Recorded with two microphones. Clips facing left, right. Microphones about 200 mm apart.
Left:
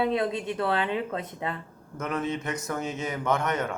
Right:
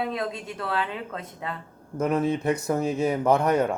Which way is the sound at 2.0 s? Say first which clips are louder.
Right 6 dB; 30° right (ahead or behind).